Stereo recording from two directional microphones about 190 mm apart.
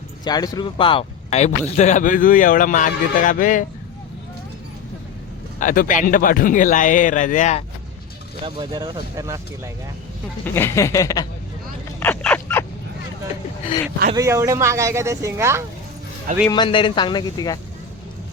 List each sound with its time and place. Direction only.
0.3 s a man's voice: 20° left (ahead or behind); by 3.7 s 45° left (ahead or behind)
5.5 s a man's voice: 45° left (ahead or behind)
8.4 s speech: 20° right (ahead or behind)
10.4 s a sound: 10° left (ahead or behind)
14.2 s speech: 15° right (ahead or behind)
16.5 s speech: 25° left (ahead or behind)